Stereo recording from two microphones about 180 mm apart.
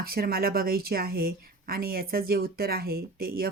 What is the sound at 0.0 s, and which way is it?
Speech, 55° right (ahead or behind).